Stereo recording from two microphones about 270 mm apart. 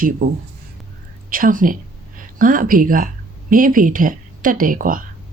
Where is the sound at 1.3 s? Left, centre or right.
Right.